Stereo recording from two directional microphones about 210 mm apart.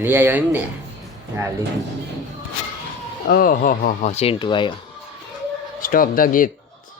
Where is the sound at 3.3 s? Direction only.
40° left (ahead or behind); by 4.7 s 20° left (ahead or behind).